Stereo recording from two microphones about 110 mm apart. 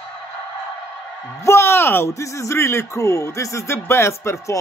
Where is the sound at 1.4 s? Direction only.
25° left (ahead or behind).